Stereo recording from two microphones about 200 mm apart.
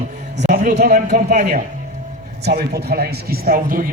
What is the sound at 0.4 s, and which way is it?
Music, 40° right (ahead or behind).